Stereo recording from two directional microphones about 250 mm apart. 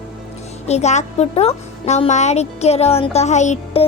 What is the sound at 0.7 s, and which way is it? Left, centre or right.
Speech, left.